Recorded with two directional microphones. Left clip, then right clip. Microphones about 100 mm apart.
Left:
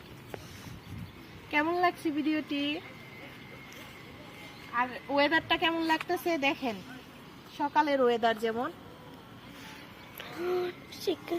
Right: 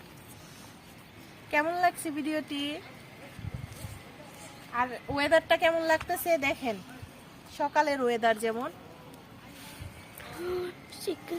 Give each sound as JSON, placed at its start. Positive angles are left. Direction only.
{"t": 1.5, "sound": "a woman's voice", "side_deg": -35}
{"t": 4.8, "sound": "a woman's voice", "side_deg": -40}
{"t": 7.6, "sound": "speech", "side_deg": -30}
{"t": 8.0, "sound": "speech", "side_deg": -10}
{"t": 10.2, "sound": "a child's voice", "side_deg": 0}